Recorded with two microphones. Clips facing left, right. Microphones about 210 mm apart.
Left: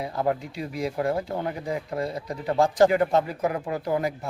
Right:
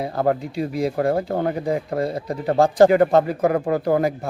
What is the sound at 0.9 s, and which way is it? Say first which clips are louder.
Speech: right 5 dB; 50° right (ahead or behind).